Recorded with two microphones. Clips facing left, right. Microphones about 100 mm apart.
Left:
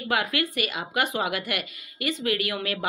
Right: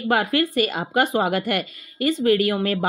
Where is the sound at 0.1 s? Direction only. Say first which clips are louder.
Right 6 dB; 40° right (ahead or behind).